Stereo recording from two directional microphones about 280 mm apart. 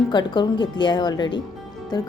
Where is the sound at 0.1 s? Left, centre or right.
Centre.